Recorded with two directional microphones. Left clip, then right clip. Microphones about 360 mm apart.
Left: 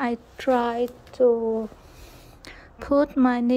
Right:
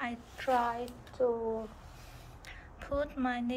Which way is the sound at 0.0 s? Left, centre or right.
Centre.